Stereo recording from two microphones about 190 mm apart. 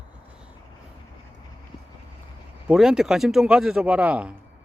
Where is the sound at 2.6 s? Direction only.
5° right (ahead or behind).